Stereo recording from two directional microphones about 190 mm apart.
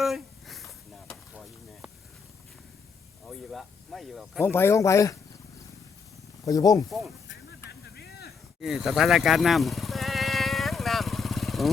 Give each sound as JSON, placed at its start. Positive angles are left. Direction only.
{"t": 0.0, "sound": "a sound", "side_deg": 0}
{"t": 3.2, "sound": "speech", "side_deg": 0}
{"t": 4.4, "sound": "speech", "side_deg": 10}
{"t": 6.4, "sound": "speech", "side_deg": 20}
{"t": 8.6, "sound": "vehicle", "side_deg": 0}